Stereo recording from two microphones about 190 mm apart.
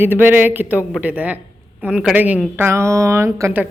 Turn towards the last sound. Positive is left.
turn(degrees=-15)  # may be behind; listen again after turning